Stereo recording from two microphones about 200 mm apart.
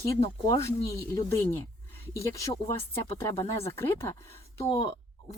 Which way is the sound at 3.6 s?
10° left (ahead or behind).